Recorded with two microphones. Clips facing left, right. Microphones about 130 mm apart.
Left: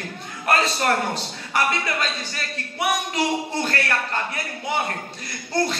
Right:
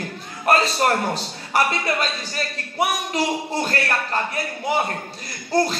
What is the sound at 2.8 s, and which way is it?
Music, 30° right (ahead or behind).